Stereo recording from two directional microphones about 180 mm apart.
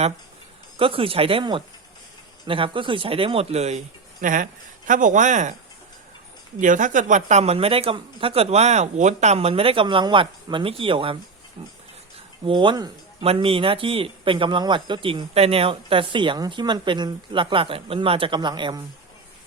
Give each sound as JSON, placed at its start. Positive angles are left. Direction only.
{"t": 0.8, "sound": "speech", "side_deg": -30}
{"t": 6.6, "sound": "speech", "side_deg": -45}
{"t": 12.5, "sound": "speech", "side_deg": -25}